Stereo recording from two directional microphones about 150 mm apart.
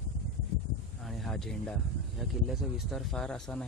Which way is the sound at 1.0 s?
Centre (ahead or behind).